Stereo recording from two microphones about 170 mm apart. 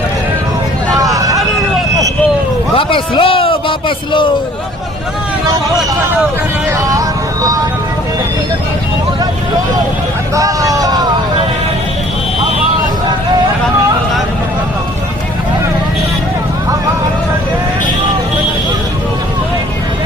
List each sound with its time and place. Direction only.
0.9 s vehicle: 20° right (ahead or behind)
2.7 s a sound: 30° left (ahead or behind)
6.7 s music: 20° right (ahead or behind)
10.3 s vehicle: 20° right (ahead or behind)